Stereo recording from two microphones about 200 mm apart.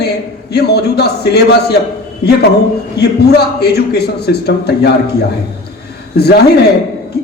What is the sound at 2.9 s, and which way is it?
A man's voice, 55° left (ahead or behind).